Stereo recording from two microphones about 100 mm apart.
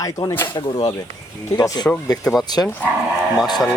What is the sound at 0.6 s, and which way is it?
Speech, 55° left (ahead or behind).